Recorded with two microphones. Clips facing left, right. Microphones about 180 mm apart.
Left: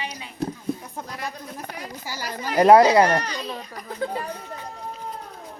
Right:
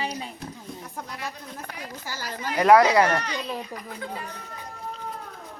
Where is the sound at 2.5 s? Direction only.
35° left (ahead or behind).